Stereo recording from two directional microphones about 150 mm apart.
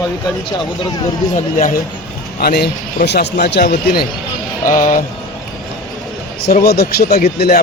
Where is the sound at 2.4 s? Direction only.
90° left.